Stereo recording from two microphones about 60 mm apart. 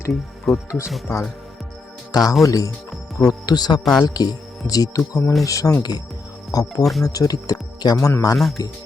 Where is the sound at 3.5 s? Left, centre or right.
Left.